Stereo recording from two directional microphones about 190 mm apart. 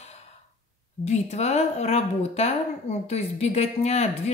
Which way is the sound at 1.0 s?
35° left (ahead or behind).